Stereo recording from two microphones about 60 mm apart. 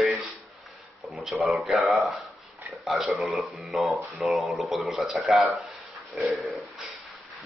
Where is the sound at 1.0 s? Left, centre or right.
Centre.